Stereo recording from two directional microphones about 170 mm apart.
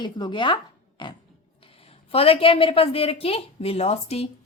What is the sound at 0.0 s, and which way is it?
A woman's voice, 25° left (ahead or behind).